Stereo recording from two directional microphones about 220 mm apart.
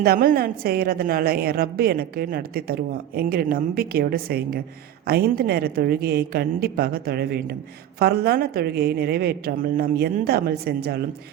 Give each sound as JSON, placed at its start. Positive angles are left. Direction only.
{"t": 0.0, "sound": "a woman's voice", "side_deg": -40}